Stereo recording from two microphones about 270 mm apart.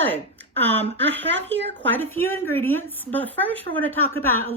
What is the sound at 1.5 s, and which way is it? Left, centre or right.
Speech, right.